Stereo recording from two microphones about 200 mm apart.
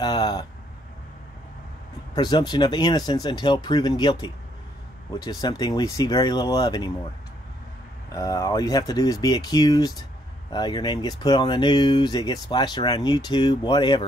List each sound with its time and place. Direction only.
0.0 s a sound: 20° left (ahead or behind)
2.1 s speech: 20° left (ahead or behind)
8.1 s speech: 15° left (ahead or behind)